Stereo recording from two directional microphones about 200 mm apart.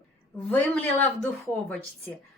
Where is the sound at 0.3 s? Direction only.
10° left (ahead or behind).